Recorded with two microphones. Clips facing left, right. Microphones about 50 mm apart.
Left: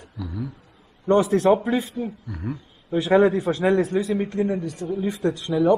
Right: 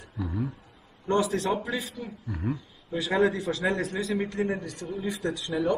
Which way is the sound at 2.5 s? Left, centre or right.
Left.